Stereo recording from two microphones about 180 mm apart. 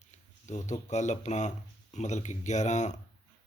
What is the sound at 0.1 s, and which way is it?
Speech, 40° left (ahead or behind).